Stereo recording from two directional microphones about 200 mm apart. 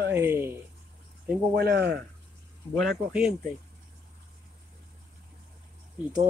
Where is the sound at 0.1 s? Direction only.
10° right (ahead or behind).